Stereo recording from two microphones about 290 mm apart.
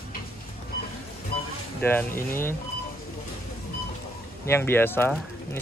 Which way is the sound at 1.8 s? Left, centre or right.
Centre.